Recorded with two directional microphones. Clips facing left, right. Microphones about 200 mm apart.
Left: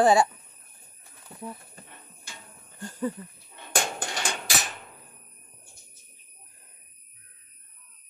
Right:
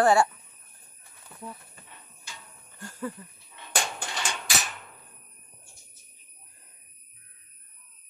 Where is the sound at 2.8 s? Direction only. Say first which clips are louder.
Left 5 dB; 15° left (ahead or behind).